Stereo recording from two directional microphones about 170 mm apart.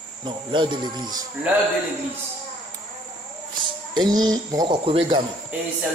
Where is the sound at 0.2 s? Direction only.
30° right (ahead or behind).